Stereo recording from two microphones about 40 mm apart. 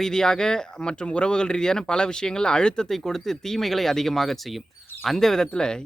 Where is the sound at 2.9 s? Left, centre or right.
Centre.